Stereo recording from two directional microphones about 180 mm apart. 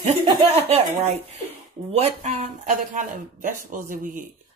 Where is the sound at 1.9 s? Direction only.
35° right (ahead or behind).